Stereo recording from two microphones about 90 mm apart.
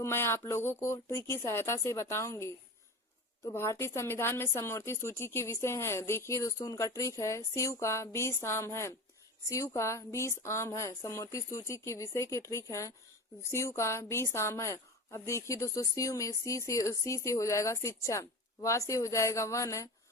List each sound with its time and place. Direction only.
0.0 s a woman's voice: 25° left (ahead or behind)